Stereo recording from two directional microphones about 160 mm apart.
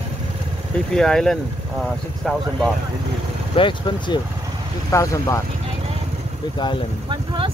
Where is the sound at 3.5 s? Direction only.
30° left (ahead or behind).